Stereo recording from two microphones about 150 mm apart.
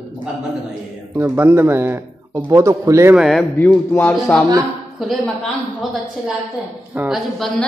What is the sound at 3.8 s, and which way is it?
Speech, 15° left (ahead or behind).